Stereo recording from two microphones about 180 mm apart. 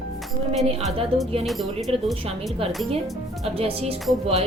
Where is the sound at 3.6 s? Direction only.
35° right (ahead or behind).